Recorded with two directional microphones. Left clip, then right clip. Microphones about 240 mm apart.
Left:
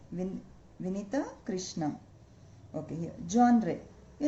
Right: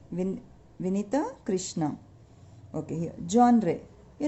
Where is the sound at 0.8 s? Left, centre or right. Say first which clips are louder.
Right 6 dB; right.